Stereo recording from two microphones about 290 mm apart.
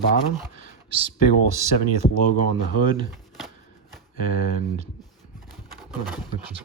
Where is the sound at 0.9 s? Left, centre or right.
Centre.